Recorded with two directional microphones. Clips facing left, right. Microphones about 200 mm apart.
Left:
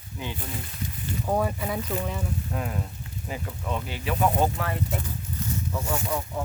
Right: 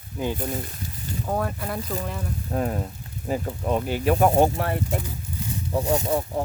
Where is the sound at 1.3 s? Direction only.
5° left (ahead or behind).